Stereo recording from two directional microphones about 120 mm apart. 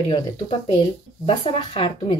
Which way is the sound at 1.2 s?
45° left (ahead or behind).